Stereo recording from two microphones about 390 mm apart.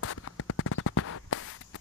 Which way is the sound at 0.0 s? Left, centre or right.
Left.